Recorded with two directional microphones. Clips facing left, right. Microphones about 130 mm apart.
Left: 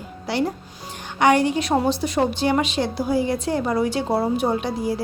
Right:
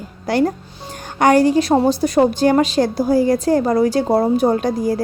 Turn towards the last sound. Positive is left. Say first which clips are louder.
# right 5 dB
turn(degrees=-45)  # may be behind; listen again after turning